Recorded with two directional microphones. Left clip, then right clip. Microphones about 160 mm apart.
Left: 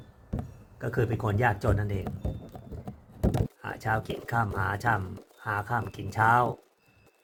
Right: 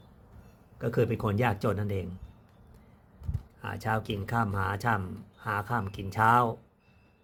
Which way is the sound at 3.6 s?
15° right (ahead or behind).